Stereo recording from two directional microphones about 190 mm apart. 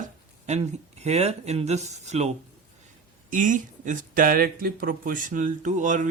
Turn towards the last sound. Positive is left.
turn(degrees=-40)  # may be behind; listen again after turning